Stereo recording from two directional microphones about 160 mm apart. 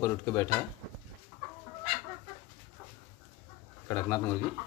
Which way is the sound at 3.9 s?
10° left (ahead or behind).